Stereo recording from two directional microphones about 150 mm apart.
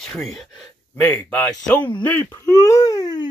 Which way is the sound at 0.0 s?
Centre (ahead or behind).